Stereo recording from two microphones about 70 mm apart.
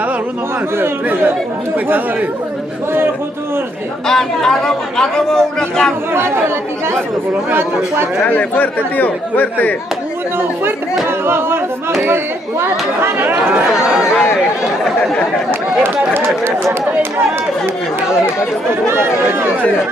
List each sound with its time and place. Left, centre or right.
0.7 s speech: right
4.1 s speech: centre
6.1 s speech: right
8.3 s speech: left
10.6 s speech: right
13.7 s speech: centre